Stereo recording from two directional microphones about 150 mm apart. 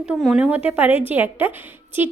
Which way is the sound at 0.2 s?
Centre (ahead or behind).